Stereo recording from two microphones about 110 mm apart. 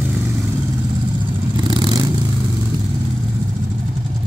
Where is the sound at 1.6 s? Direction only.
45° right (ahead or behind).